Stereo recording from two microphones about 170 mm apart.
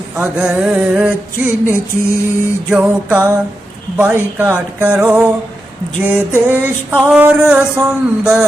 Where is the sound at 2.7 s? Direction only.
10° right (ahead or behind).